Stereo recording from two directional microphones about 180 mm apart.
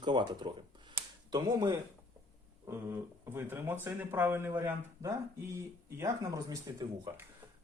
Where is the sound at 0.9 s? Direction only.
20° right (ahead or behind).